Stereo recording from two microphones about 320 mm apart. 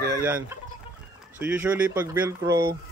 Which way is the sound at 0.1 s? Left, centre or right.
Centre.